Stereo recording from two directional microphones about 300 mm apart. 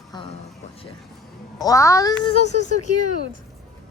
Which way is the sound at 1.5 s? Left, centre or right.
Centre.